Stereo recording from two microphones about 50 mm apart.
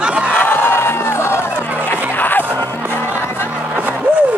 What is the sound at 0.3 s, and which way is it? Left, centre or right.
Music, left.